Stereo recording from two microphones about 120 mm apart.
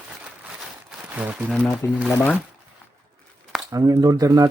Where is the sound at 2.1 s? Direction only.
10° left (ahead or behind).